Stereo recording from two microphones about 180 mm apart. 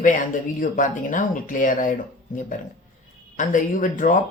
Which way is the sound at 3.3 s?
45° left (ahead or behind).